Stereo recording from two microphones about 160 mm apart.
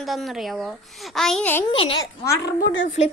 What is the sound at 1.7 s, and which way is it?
Speech, 30° left (ahead or behind).